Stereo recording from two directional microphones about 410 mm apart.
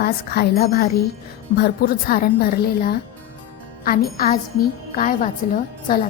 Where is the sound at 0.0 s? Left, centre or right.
Left.